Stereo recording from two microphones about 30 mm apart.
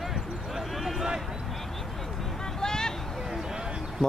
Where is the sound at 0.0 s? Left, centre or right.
Centre.